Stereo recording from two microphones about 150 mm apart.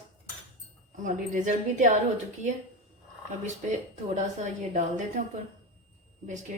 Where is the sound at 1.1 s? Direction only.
55° right (ahead or behind).